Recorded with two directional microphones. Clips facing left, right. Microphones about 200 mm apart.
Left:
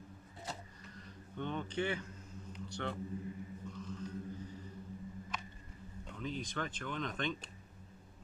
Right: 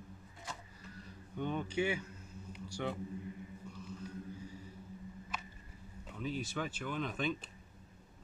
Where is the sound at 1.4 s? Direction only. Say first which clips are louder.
Right 2 dB; 10° right (ahead or behind).